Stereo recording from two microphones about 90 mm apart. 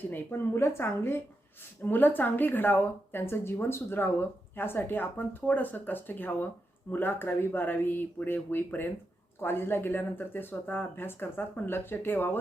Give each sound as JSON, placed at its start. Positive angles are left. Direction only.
{"t": 0.1, "sound": "a woman's voice", "side_deg": 25}